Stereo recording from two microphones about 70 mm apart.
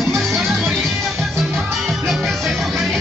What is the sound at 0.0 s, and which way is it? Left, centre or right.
Music, centre.